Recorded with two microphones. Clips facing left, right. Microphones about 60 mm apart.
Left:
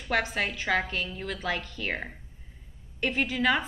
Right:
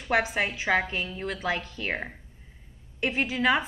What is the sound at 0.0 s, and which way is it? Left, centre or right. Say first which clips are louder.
A woman's voice: right 2 dB; centre.